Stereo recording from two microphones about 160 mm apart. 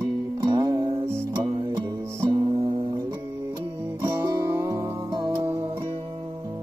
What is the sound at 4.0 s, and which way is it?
Music, 20° right (ahead or behind).